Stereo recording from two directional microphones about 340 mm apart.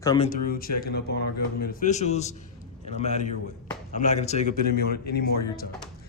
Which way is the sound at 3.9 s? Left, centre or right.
Left.